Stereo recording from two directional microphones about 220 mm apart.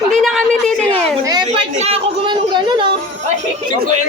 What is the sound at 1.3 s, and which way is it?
Speech, 20° right (ahead or behind).